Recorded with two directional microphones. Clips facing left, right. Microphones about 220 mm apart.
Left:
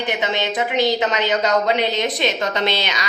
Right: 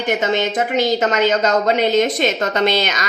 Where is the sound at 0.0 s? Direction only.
45° right (ahead or behind).